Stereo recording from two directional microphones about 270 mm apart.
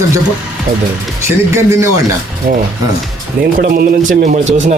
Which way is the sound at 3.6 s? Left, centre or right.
Right.